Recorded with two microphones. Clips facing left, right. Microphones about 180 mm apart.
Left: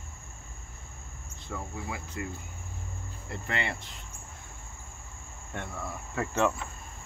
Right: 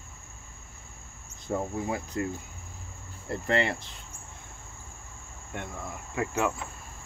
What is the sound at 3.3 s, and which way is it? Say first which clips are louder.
Speech: right 7 dB; 35° right (ahead or behind).